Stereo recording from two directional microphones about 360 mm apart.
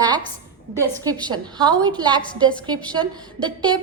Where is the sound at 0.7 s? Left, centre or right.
Centre.